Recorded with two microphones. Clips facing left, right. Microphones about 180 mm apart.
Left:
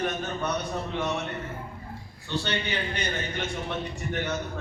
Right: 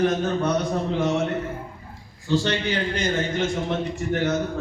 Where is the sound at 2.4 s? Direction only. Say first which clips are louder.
Right 3 dB; 90° right.